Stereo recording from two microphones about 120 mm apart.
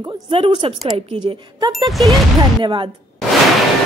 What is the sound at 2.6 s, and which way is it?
Speech, 45° right (ahead or behind).